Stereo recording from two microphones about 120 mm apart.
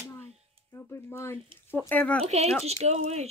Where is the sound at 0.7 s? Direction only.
20° left (ahead or behind).